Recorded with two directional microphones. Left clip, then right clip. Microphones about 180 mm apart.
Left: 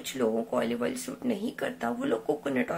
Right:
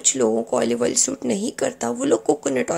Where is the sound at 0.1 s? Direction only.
35° right (ahead or behind).